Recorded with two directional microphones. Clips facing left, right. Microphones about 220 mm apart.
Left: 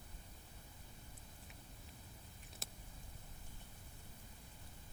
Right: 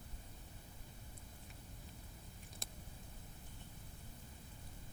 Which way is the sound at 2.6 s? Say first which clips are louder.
Left 1 dB; 5° left (ahead or behind).